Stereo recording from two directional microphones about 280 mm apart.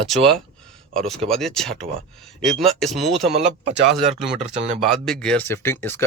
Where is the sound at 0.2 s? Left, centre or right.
Centre.